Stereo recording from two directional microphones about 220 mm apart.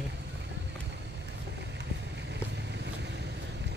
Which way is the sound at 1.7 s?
50° right (ahead or behind).